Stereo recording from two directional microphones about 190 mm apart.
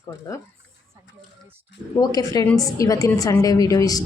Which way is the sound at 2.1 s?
20° left (ahead or behind).